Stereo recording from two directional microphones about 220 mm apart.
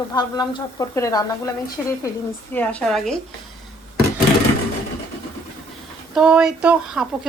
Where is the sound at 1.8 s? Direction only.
Centre (ahead or behind).